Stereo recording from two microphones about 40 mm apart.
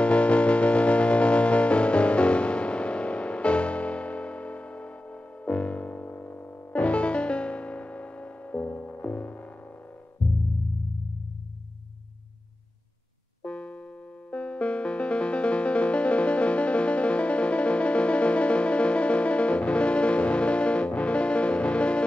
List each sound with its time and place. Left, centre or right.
0.0 s music: left
13.4 s music: left